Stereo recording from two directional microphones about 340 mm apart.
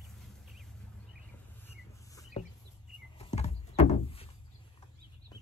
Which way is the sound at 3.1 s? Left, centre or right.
Centre.